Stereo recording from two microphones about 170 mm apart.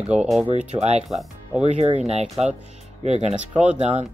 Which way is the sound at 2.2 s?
Centre (ahead or behind).